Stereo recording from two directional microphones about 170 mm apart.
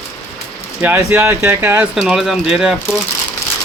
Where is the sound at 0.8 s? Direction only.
15° right (ahead or behind).